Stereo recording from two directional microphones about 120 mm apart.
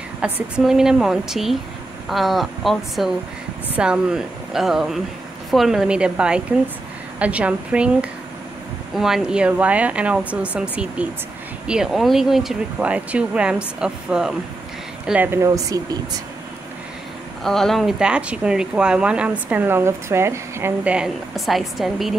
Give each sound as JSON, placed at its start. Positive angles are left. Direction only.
{"t": 0.2, "sound": "a woman's voice", "side_deg": -5}
{"t": 17.4, "sound": "speech", "side_deg": 5}
{"t": 20.8, "sound": "a woman's voice", "side_deg": -5}